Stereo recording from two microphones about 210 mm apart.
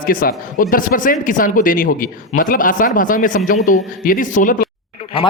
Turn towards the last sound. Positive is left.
turn(degrees=25)  # may be behind; listen again after turning